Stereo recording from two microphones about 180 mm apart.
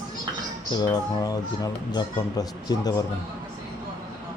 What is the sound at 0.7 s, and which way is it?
Speech, 25° left (ahead or behind).